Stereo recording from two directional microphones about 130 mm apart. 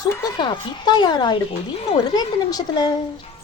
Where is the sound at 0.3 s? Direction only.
35° left (ahead or behind).